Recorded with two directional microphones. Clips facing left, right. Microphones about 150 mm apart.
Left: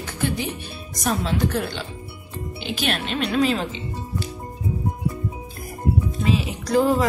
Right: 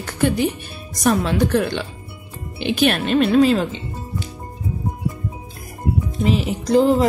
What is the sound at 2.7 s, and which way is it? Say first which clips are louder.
Speech: right 9 dB; 55° right (ahead or behind).